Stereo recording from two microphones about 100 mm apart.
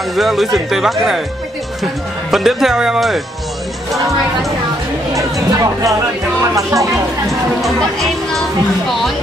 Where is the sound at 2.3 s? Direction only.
5° right (ahead or behind).